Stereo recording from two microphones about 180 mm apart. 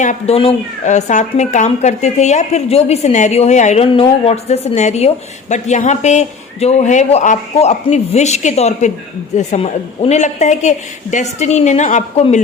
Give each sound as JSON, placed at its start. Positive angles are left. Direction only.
{"t": 0.0, "sound": "a woman's voice", "side_deg": 40}